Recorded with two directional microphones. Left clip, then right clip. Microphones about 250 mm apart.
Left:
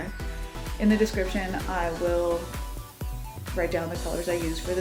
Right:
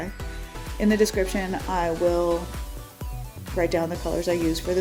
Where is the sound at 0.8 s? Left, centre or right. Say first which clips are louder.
Right 3 dB; right.